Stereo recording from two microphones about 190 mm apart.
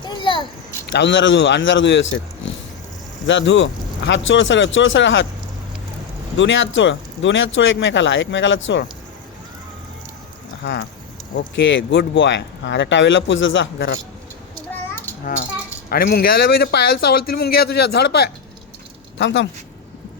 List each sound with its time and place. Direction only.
0.0 s a sound: 25° left (ahead or behind)
0.9 s speech: 65° left (ahead or behind)
6.3 s speech: 75° left (ahead or behind)
10.6 s speech: 60° left (ahead or behind)
15.2 s speech: 45° left (ahead or behind)
19.2 s speech: 70° left (ahead or behind)